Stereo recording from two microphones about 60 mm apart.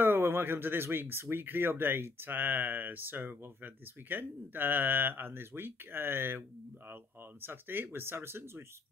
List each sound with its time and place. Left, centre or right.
0.0 s speech: right
7.4 s speech: right